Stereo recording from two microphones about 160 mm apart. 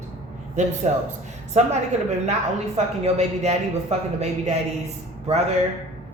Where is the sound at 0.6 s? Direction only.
45° right (ahead or behind).